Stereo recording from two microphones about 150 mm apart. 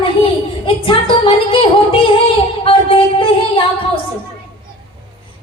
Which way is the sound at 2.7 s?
35° left (ahead or behind).